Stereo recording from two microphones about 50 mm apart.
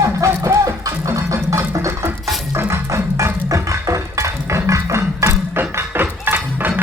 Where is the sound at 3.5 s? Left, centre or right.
Right.